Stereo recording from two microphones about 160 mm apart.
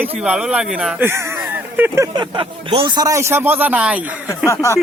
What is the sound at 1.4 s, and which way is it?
Vehicle, 10° right (ahead or behind).